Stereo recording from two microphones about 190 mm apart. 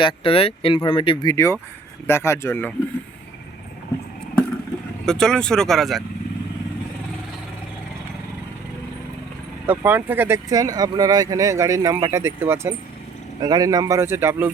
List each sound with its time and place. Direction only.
0.0 s speech: 30° left (ahead or behind); by 2.7 s 10° left (ahead or behind)
5.0 s speech: 5° left (ahead or behind)
9.6 s speech: 10° right (ahead or behind)